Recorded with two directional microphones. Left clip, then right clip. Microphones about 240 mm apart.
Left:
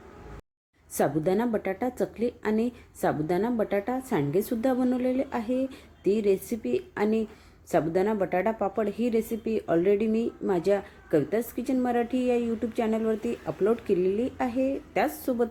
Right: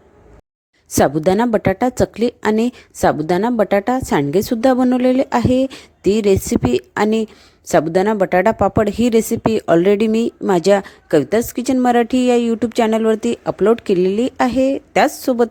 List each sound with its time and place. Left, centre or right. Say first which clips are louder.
0.9 s a woman's voice: right 11 dB; right